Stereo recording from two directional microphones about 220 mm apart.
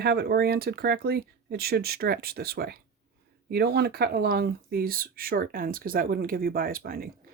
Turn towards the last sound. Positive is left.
turn(degrees=-40)  # may be behind; listen again after turning